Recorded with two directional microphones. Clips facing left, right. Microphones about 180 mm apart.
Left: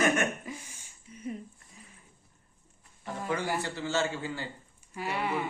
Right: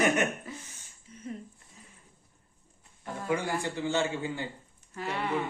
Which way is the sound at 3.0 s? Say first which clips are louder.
Right 2 dB; 10° right (ahead or behind).